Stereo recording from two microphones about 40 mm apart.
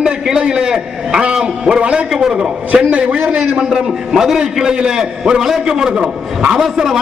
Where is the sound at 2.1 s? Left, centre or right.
Centre.